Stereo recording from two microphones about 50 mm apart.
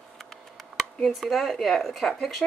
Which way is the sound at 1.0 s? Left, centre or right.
Centre.